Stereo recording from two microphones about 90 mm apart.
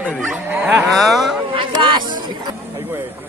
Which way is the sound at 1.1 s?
Centre (ahead or behind).